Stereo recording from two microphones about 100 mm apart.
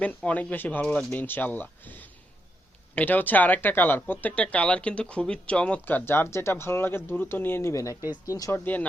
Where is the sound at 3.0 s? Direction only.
15° left (ahead or behind); by 8.5 s 35° left (ahead or behind).